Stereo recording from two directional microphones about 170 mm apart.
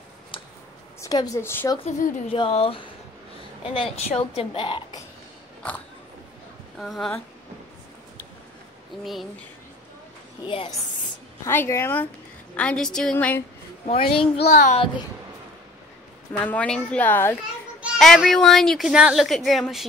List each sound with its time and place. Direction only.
1.0 s a woman's voice: 20° left (ahead or behind)
1.8 s a woman's voice: 45° left (ahead or behind)
2.3 s a woman's voice: 35° left (ahead or behind)
6.8 s a woman's voice: centre (ahead or behind)
9.0 s a woman's voice: centre (ahead or behind)
10.4 s a woman's voice: 30° left (ahead or behind)
11.4 s a woman's voice: 15° left (ahead or behind)
13.8 s a woman's voice: 30° left (ahead or behind)
14.5 s a woman's voice: 45° left (ahead or behind)
16.4 s a woman's voice: 5° left (ahead or behind)